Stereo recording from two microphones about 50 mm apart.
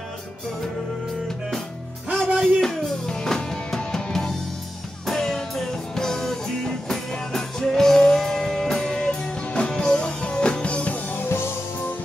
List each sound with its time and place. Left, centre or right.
2.3 s music: centre; by 11.1 s left
11.1 s music: left